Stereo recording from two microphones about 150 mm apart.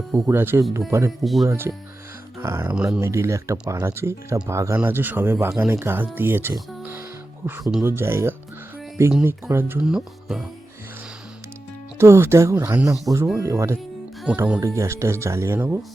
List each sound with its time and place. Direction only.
0.3 s speech: 15° right (ahead or behind)
1.2 s speech: centre (ahead or behind)
1.5 s speech: 15° right (ahead or behind)
2.7 s speech: 5° right (ahead or behind)
3.0 s speech: 20° right (ahead or behind)
7.6 s speech: 5° right (ahead or behind)
7.9 s speech: 15° right (ahead or behind)
11.9 s speech: 15° right (ahead or behind)
14.3 s speech: 10° right (ahead or behind)
14.6 s speech: 20° right (ahead or behind)